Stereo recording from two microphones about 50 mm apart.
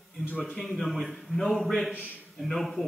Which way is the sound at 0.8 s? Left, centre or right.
Centre.